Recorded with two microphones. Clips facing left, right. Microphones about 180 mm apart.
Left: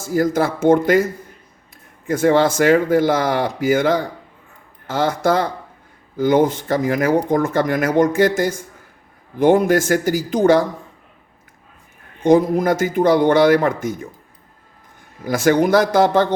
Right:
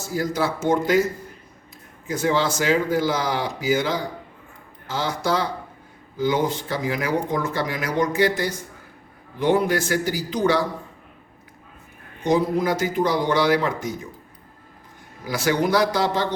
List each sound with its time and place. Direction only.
0.0 s speech: 50° left (ahead or behind)
2.0 s speech: 55° left (ahead or behind)
12.2 s speech: 50° left (ahead or behind)
15.2 s speech: 50° left (ahead or behind)